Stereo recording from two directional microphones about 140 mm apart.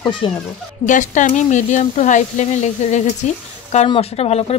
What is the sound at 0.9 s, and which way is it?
Speech, 65° left (ahead or behind).